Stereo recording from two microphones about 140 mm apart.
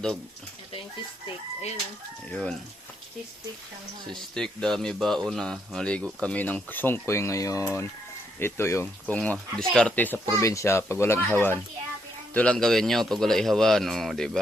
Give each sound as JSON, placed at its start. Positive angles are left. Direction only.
{"t": 2.3, "sound": "speech", "side_deg": 5}
{"t": 4.2, "sound": "a man's voice", "side_deg": 5}